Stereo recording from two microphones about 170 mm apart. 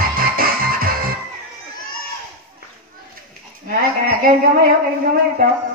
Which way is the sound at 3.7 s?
55° right (ahead or behind).